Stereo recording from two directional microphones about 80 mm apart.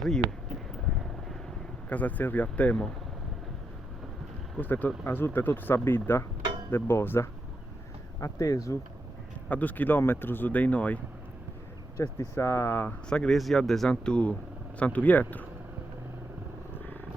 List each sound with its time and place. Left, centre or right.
1.9 s speech: centre
4.5 s speech: left
8.2 s speech: left
9.5 s speech: left
11.9 s speech: left
13.1 s speech: centre